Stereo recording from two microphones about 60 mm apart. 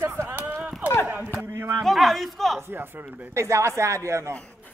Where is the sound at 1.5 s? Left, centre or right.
Right.